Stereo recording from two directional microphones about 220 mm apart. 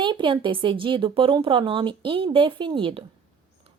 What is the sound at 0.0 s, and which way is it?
A woman's voice, 20° right (ahead or behind).